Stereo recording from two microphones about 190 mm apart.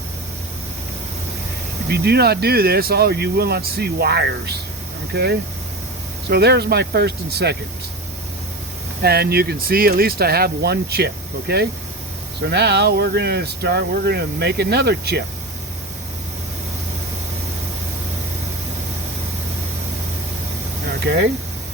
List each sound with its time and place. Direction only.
1.9 s speech: 55° right (ahead or behind)
9.0 s speech: 55° right (ahead or behind)
21.1 s speech: 65° right (ahead or behind)